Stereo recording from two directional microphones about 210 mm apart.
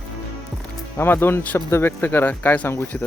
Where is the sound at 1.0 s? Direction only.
10° left (ahead or behind).